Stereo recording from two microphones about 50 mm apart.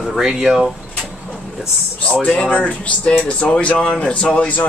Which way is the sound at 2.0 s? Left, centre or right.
Left.